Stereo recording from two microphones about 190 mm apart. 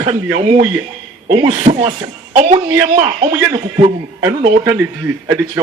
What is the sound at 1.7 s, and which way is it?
Speech, 35° right (ahead or behind).